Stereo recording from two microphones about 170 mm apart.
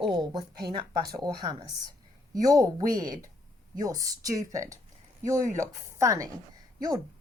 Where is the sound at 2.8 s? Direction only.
55° right (ahead or behind).